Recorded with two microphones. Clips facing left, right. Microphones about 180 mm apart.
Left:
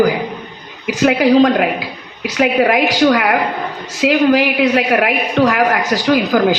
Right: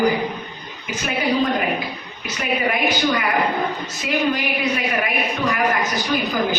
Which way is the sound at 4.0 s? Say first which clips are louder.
Left 10 dB; 90° left.